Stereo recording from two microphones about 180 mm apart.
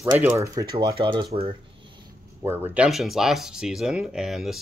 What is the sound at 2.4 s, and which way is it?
Speech, 10° right (ahead or behind).